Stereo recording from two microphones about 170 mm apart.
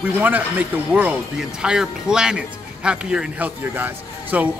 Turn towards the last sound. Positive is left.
turn(degrees=-10)  # may be behind; listen again after turning